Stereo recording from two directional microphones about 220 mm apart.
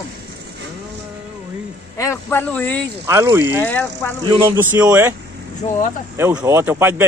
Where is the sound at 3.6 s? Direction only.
10° left (ahead or behind).